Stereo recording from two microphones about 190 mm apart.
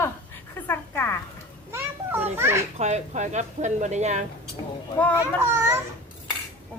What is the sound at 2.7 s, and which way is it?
Speech, 35° right (ahead or behind).